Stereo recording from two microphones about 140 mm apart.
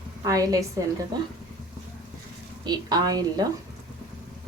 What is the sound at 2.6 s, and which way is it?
Speech, 30° right (ahead or behind).